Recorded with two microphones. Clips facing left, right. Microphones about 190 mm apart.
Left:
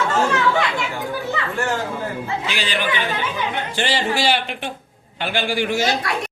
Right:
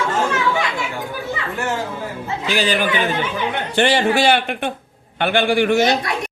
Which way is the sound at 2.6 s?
45° right (ahead or behind).